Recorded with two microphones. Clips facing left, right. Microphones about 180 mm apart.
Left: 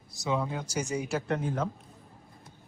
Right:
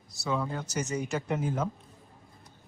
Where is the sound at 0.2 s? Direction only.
20° left (ahead or behind); by 1.6 s centre (ahead or behind).